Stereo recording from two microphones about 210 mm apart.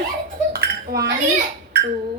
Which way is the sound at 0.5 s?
50° right (ahead or behind).